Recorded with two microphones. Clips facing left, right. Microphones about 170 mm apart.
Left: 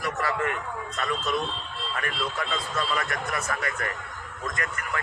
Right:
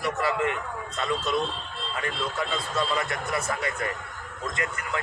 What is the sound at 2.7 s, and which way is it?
A man's voice, 20° right (ahead or behind).